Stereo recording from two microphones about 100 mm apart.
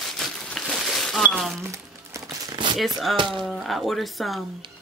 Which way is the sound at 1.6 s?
30° right (ahead or behind).